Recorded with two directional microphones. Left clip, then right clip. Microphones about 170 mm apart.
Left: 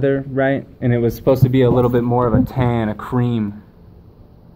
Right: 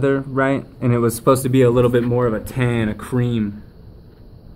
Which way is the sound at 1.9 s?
25° right (ahead or behind).